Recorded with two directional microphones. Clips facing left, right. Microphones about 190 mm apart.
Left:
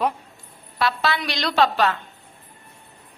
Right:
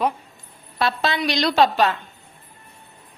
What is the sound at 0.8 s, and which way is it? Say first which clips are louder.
A woman's voice: right 1 dB; 20° right (ahead or behind).